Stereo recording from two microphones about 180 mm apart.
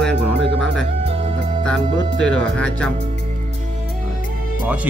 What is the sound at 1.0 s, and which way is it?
Music, 35° right (ahead or behind).